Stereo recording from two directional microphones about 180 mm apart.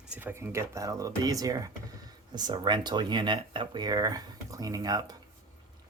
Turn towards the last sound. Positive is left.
turn(degrees=-20)  # may be behind; listen again after turning